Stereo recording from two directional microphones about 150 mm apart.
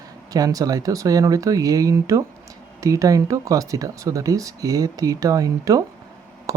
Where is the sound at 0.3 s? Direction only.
25° right (ahead or behind).